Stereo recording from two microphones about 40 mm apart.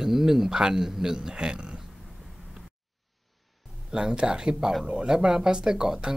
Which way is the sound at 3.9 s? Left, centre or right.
Centre.